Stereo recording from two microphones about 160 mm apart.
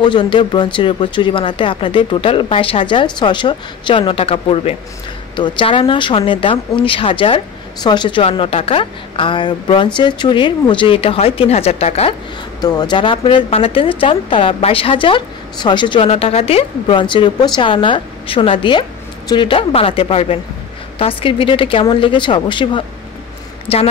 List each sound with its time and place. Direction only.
0.0 s speech: 30° left (ahead or behind)
12.5 s speech: 25° left (ahead or behind)